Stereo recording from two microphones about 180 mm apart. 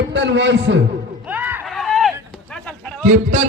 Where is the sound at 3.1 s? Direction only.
45° right (ahead or behind).